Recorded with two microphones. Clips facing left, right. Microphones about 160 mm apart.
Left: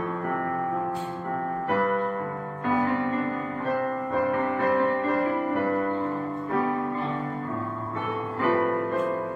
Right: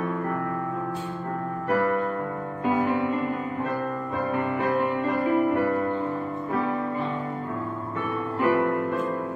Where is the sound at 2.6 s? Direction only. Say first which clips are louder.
Right 1 dB; 15° right (ahead or behind).